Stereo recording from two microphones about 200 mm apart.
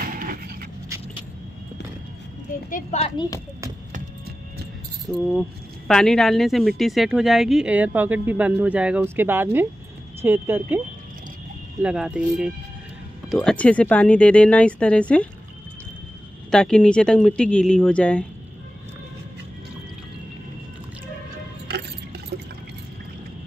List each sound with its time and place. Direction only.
0.0 s pant: 45° right (ahead or behind)
2.7 s a child's voice: 30° left (ahead or behind)
5.0 s speech: 5° left (ahead or behind)
11.8 s speech: 5° right (ahead or behind)
16.4 s speech: 5° left (ahead or behind)